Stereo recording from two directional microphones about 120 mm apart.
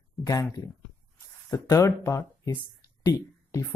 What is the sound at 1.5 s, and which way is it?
Speech, 25° left (ahead or behind).